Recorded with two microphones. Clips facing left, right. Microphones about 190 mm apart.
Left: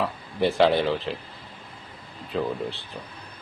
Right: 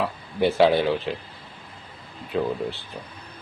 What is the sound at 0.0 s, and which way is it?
Speech, centre (ahead or behind).